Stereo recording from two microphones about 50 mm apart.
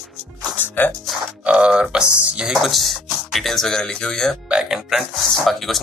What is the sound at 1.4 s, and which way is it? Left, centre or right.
Speech, right.